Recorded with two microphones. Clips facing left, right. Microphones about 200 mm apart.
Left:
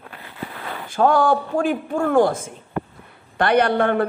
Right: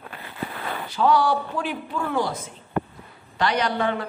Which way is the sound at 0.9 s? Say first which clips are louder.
Left 3 dB; 50° left (ahead or behind).